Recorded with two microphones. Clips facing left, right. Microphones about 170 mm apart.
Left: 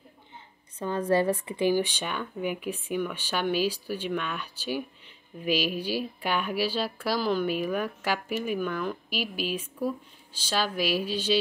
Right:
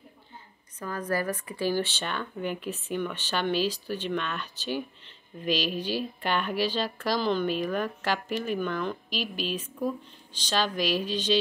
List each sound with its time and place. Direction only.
0.7 s a woman's voice: 25° left (ahead or behind)
1.7 s speech: 15° left (ahead or behind)